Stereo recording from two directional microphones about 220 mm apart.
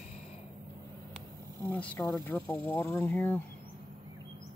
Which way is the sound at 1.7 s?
5° left (ahead or behind).